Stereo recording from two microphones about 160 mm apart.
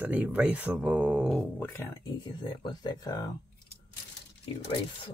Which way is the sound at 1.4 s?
10° left (ahead or behind).